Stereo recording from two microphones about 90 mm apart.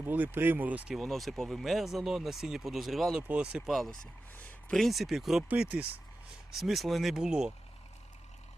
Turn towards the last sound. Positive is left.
turn(degrees=-5)  # may be behind; listen again after turning